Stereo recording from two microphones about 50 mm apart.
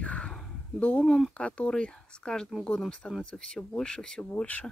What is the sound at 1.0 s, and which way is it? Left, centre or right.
Speech, centre.